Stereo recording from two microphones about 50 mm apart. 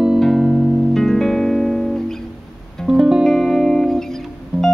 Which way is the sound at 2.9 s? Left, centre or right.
Centre.